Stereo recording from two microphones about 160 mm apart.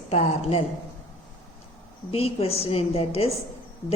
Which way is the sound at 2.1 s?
40° left (ahead or behind).